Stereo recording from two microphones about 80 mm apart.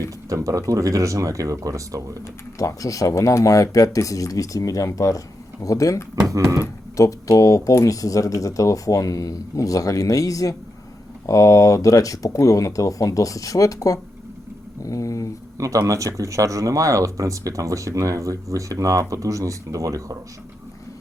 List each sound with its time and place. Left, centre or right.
0.3 s speech: right
2.6 s speech: left
6.2 s speech: right
6.9 s speech: left
14.8 s a sound: left
15.5 s speech: right